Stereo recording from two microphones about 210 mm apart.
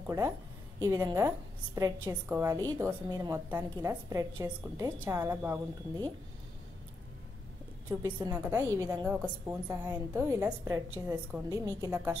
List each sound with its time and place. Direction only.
0.7 s a woman's voice: 15° right (ahead or behind)
8.0 s a woman's voice: 15° right (ahead or behind)